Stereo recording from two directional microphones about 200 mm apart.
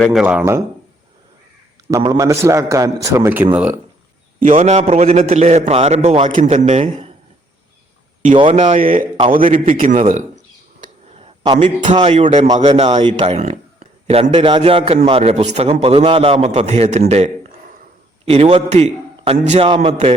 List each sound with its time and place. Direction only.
0.0 s speech: centre (ahead or behind)
1.9 s a man's voice: 20° right (ahead or behind)
4.5 s a man's voice: 35° right (ahead or behind)
8.3 s a man's voice: 25° right (ahead or behind)
10.8 s a sound: 30° right (ahead or behind)
11.9 s a man's voice: 30° right (ahead or behind)